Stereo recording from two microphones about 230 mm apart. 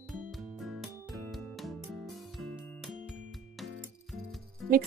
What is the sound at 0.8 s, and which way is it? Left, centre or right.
Music, centre.